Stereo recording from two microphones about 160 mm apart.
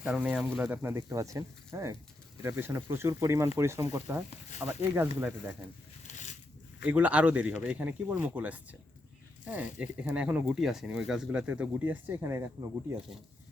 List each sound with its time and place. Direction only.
0.0 s speech: 5° right (ahead or behind)
6.1 s a sound: 50° left (ahead or behind)
6.8 s speech: 10° right (ahead or behind)